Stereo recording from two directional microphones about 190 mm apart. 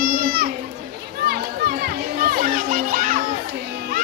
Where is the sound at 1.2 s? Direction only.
55° right (ahead or behind).